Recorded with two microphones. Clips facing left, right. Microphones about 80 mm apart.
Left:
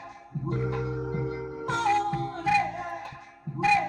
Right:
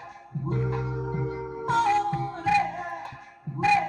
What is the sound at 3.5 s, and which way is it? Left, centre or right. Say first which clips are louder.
Music: even; left.